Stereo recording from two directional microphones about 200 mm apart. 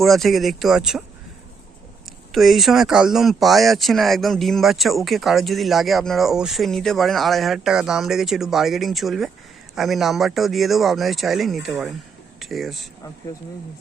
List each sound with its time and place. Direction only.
0.0 s speech: centre (ahead or behind)
2.0 s speech: centre (ahead or behind)